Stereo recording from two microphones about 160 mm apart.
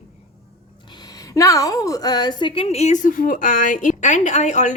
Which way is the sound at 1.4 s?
20° left (ahead or behind).